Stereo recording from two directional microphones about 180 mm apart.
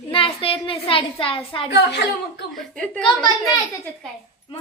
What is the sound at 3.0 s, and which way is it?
Speech, 25° left (ahead or behind).